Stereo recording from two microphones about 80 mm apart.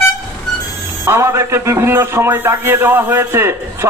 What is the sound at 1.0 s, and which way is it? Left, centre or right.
A man's voice, right.